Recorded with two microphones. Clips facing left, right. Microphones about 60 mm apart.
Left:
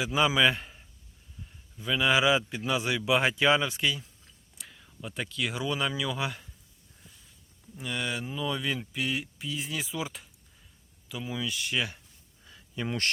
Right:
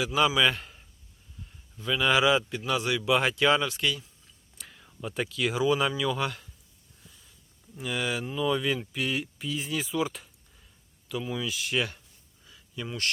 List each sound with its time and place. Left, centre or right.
0.0 s a man's voice: left
4.5 s a man's voice: centre
7.8 s speech: centre
12.5 s a sound: left